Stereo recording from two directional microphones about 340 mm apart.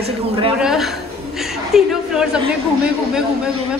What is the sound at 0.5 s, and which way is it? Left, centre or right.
A woman's voice, centre.